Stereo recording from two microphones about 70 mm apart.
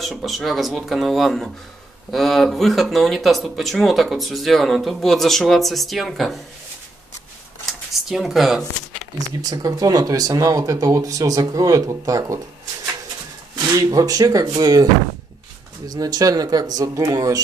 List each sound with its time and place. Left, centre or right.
0.0 s speech: centre
8.1 s speech: centre
9.4 s speech: right
13.7 s speech: right
15.9 s speech: right